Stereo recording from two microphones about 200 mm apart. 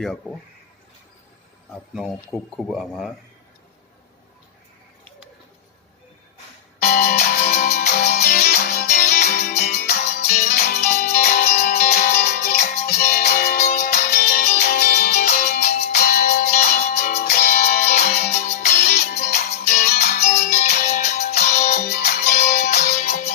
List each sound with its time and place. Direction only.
0.0 s speech: 5° left (ahead or behind)
2.0 s speech: centre (ahead or behind)
6.8 s music: 45° left (ahead or behind)
17.2 s music: 45° left (ahead or behind)